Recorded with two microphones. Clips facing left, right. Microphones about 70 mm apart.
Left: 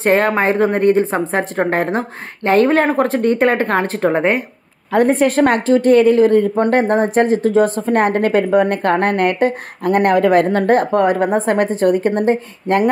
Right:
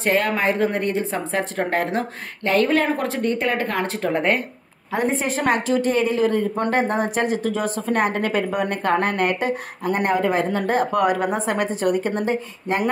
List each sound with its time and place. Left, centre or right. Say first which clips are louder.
0.0 s a woman's voice: left 6 dB; left
4.9 s speech: left 9 dB; left
10.9 s a woman's voice: left 5 dB; left